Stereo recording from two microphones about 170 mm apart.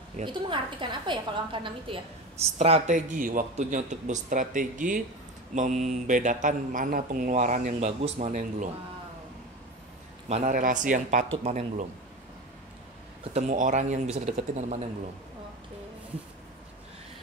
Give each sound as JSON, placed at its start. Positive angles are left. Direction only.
{"t": 0.2, "sound": "a woman's voice", "side_deg": -30}
{"t": 10.2, "sound": "speech", "side_deg": -40}
{"t": 13.3, "sound": "speech", "side_deg": -50}